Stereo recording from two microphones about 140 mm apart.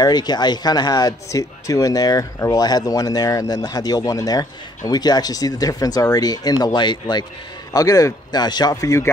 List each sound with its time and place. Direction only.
0.0 s speech: 30° left (ahead or behind)